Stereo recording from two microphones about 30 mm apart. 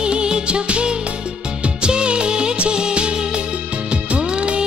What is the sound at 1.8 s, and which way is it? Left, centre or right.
Music of bollywood, right.